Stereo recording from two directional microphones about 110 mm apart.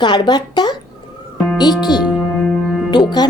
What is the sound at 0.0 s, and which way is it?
Speech, 40° left (ahead or behind).